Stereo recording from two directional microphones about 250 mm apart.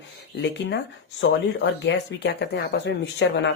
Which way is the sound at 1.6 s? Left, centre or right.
Left.